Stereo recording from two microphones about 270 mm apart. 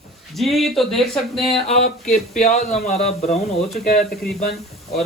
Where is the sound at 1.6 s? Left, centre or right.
Left.